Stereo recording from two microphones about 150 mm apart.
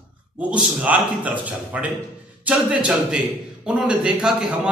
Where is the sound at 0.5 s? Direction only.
10° right (ahead or behind).